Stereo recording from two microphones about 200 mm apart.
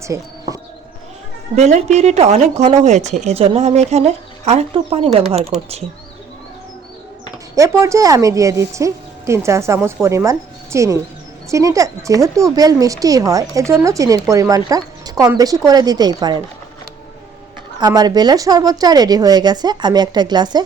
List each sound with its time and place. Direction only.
0.0 s a sound: 15° right (ahead or behind)
1.5 s speech: 35° right (ahead or behind)
7.5 s a woman's voice: 15° right (ahead or behind)
17.7 s speech: 20° right (ahead or behind)